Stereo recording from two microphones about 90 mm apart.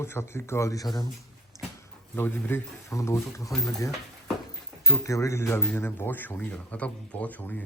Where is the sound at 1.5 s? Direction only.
35° left (ahead or behind).